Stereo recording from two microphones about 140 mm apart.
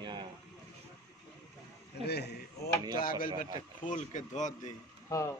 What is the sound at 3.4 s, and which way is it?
A man's voice, 60° left (ahead or behind).